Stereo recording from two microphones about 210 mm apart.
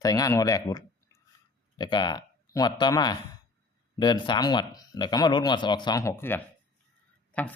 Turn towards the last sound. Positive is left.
turn(degrees=5)  # may be behind; listen again after turning